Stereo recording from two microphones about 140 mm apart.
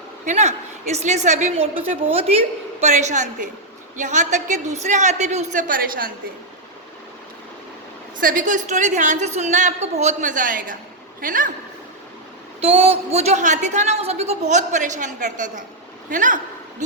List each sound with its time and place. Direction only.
0.3 s a woman's voice: 55° right (ahead or behind)
5.6 s a woman's voice: 90° right
8.2 s a woman's voice: 75° right (ahead or behind)
12.5 s a woman's voice: 45° right (ahead or behind); by 16.4 s 65° right (ahead or behind)